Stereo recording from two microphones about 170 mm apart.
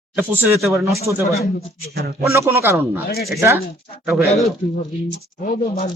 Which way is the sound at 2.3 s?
15° right (ahead or behind).